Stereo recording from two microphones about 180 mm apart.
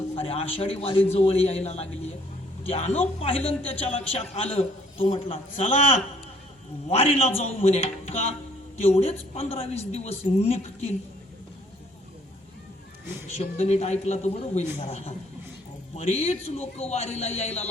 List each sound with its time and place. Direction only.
0.2 s a man's voice: 35° left (ahead or behind)
13.4 s a man's voice: 35° left (ahead or behind)